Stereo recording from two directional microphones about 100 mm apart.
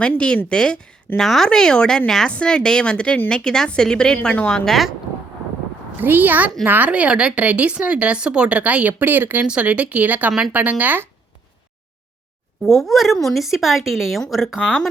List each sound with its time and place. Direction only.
0.2 s a woman's voice: 10° left (ahead or behind)
6.0 s a woman's voice: 20° right (ahead or behind)
12.7 s speech: centre (ahead or behind)